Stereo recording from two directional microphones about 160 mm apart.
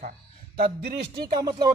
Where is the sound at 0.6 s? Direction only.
80° right.